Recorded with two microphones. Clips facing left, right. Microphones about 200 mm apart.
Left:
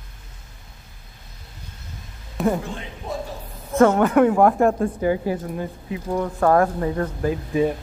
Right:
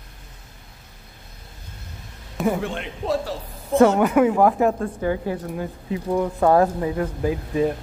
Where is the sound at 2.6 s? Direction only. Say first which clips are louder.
Right 5 dB; 65° right (ahead or behind).